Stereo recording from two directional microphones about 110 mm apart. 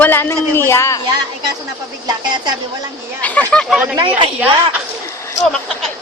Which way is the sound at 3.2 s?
15° left (ahead or behind).